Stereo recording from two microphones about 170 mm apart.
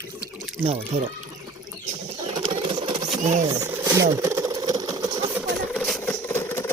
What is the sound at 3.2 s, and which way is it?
Speech, 45° right (ahead or behind).